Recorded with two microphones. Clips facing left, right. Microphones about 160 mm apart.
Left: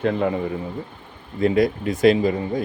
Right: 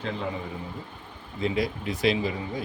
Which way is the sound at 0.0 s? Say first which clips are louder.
Left 10 dB; 60° left (ahead or behind).